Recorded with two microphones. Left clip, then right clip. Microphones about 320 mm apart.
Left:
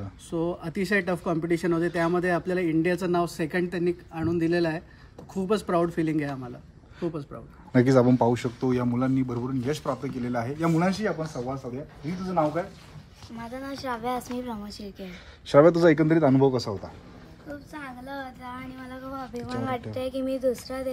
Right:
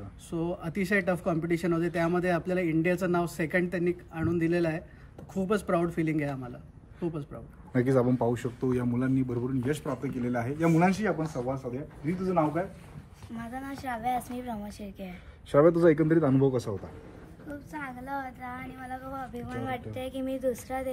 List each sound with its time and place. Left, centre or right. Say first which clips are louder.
0.3 s speech: left 4 dB; centre
7.7 s speech: left 5 dB; left; by 14.6 s centre
15.4 s speech: left 4 dB; left
17.7 s speech: right 2 dB; centre